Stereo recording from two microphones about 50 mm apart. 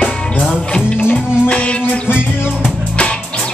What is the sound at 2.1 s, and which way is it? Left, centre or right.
Music, left.